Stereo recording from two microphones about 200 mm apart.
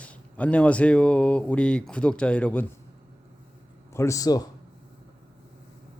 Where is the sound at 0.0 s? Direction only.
5° left (ahead or behind).